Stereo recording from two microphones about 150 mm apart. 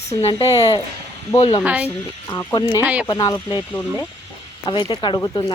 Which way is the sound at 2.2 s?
20° left (ahead or behind).